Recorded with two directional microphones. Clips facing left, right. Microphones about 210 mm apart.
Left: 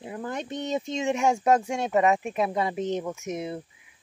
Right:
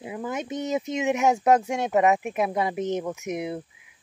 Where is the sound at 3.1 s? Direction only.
20° right (ahead or behind).